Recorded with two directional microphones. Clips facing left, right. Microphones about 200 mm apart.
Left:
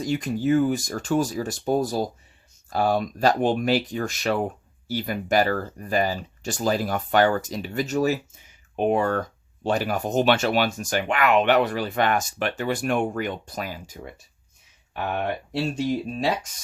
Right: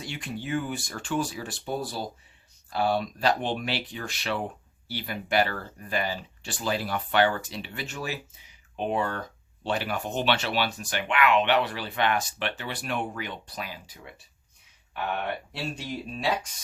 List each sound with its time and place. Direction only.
0.0 s speech: 40° left (ahead or behind)
15.5 s speech: 45° left (ahead or behind)